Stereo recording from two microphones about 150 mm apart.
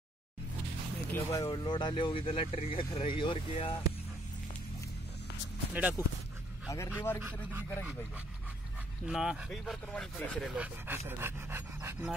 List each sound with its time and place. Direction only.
1.1 s speech: 20° left (ahead or behind)
5.8 s speech: 10° right (ahead or behind)
6.7 s a man's voice: 15° left (ahead or behind)
9.0 s speech: 5° right (ahead or behind)
10.5 s speech: 10° right (ahead or behind)